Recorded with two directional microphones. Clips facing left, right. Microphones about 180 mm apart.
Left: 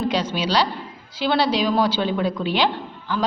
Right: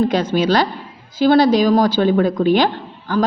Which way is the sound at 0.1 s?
50° right (ahead or behind).